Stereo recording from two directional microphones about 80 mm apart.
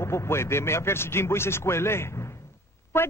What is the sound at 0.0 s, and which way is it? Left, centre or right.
A man's voice, left.